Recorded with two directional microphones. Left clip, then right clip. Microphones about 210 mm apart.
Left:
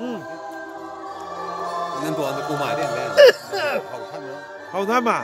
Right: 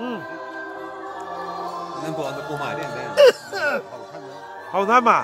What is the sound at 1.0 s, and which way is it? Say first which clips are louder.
Music: left 1 dB; 45° right (ahead or behind).